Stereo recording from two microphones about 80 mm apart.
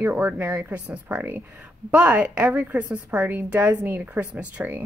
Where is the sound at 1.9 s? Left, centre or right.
Centre.